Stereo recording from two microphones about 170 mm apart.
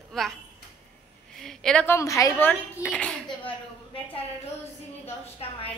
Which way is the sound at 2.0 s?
20° left (ahead or behind).